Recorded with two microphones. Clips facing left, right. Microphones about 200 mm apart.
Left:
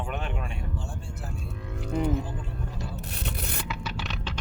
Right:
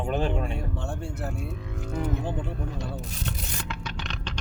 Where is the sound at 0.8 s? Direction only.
65° right (ahead or behind).